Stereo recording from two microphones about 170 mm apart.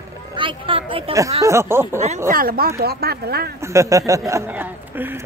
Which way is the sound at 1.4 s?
15° right (ahead or behind).